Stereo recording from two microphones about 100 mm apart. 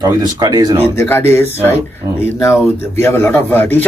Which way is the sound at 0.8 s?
25° left (ahead or behind).